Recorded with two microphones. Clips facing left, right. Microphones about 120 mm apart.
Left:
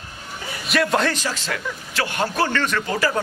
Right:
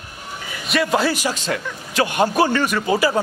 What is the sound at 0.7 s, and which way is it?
A man's voice, centre (ahead or behind).